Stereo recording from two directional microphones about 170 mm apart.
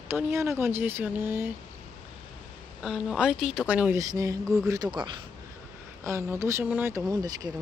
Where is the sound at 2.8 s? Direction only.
5° right (ahead or behind).